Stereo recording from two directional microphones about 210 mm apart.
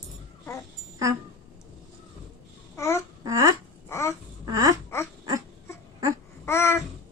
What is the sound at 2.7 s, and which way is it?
Babbling, 15° left (ahead or behind).